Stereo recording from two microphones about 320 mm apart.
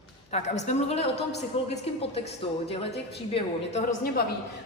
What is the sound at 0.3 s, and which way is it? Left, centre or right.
Speech, left.